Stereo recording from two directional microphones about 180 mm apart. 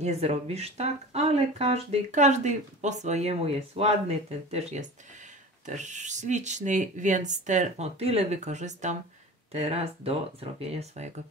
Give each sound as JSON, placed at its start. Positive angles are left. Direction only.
{"t": 0.0, "sound": "speech", "side_deg": -35}